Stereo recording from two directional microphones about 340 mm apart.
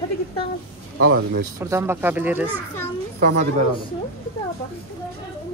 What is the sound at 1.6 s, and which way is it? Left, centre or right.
Speech, centre.